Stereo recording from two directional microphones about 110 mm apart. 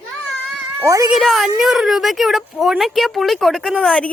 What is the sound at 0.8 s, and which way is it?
Speech, 30° right (ahead or behind).